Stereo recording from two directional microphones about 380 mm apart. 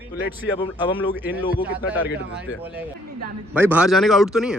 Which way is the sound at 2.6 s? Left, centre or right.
Centre.